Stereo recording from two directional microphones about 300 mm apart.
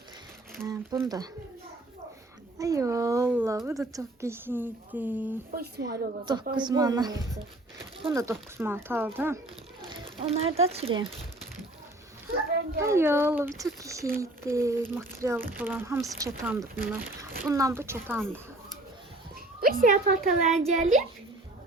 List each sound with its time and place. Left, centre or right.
0.5 s speech: centre
2.6 s speech: centre
5.5 s speech: right
5.9 s speech: centre
9.9 s a sound: centre
10.6 s speech: centre
12.8 s speech: centre
19.6 s speech: right